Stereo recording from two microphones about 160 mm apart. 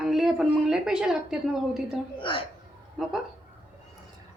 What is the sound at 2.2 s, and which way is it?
Speech, 30° left (ahead or behind).